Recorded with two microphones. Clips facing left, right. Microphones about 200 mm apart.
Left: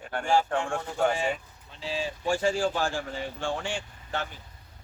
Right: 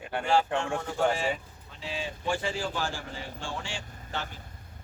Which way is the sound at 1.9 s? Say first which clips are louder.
Left 3 dB; 45° left (ahead or behind).